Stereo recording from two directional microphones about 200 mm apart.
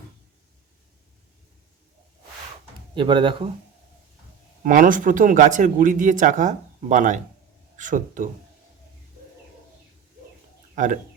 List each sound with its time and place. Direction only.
2.9 s speech: 25° right (ahead or behind)
4.6 s speech: 40° right (ahead or behind)
10.8 s speech: 40° right (ahead or behind)